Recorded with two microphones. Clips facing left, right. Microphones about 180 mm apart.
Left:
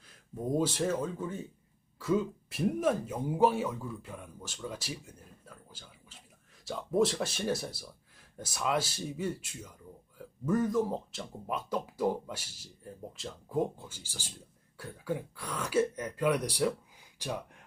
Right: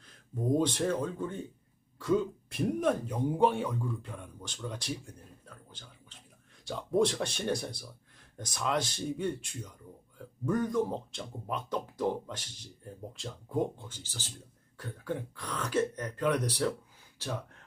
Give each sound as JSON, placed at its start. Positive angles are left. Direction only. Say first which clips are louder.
{"t": 0.0, "sound": "speech", "louder": "right 2 dB", "side_deg": 5}